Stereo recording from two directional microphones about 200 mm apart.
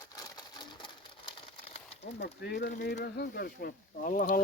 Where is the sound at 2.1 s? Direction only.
55° left (ahead or behind).